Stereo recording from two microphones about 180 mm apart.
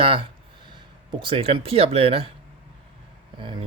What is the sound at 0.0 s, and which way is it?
Speech, 30° right (ahead or behind).